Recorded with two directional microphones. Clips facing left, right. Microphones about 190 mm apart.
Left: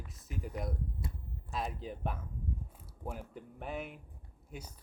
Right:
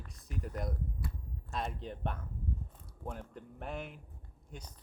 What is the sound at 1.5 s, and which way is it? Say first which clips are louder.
Speech: even; centre (ahead or behind).